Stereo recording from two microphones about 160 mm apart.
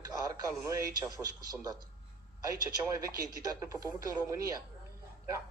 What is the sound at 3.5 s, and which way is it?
Speech, 20° right (ahead or behind).